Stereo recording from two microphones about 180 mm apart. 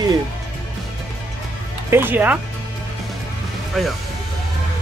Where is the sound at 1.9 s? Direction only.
10° right (ahead or behind).